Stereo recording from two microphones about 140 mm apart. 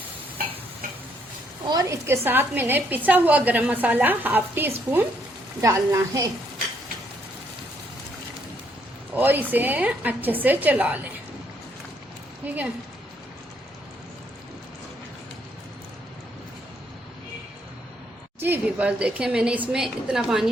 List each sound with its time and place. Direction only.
1.6 s a woman's voice: 25° right (ahead or behind)
9.1 s a woman's voice: 15° right (ahead or behind)
12.4 s a woman's voice: 10° right (ahead or behind)
18.3 s a woman's voice: 15° right (ahead or behind)